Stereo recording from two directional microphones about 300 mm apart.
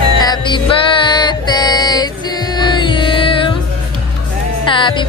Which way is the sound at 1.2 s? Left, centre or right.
Centre.